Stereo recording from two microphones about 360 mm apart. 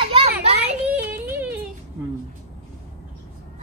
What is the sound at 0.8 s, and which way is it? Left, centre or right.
Yodeling, centre.